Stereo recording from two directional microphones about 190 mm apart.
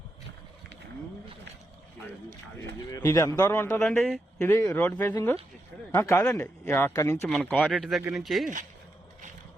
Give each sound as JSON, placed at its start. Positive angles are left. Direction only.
{"t": 2.9, "sound": "a man's voice", "side_deg": 20}
{"t": 3.8, "sound": "a man's voice", "side_deg": 5}